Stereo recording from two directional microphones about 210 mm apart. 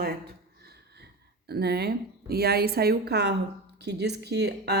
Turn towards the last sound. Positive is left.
turn(degrees=-50)  # may be behind; listen again after turning